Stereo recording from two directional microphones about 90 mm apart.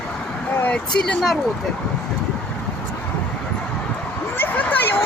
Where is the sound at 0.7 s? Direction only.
10° left (ahead or behind).